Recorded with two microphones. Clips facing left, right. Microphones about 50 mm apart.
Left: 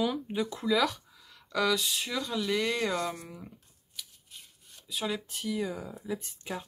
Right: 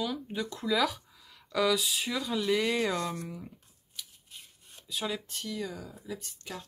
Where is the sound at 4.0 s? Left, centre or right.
Centre.